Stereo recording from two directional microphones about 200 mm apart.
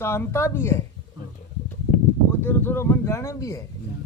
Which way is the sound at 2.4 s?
10° left (ahead or behind).